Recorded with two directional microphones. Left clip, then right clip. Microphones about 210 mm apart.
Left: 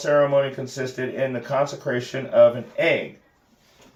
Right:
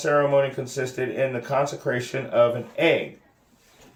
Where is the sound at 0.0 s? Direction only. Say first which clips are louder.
Left 1 dB; 35° right (ahead or behind).